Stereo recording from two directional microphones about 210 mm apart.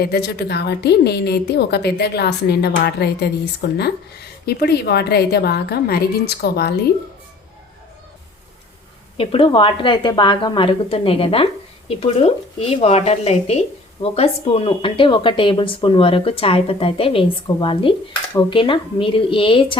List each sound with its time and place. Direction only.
0.0 s a woman's voice: 50° left (ahead or behind)
9.1 s speech: 25° left (ahead or behind)